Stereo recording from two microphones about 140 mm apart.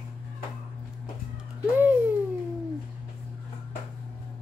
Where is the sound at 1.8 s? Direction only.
15° right (ahead or behind).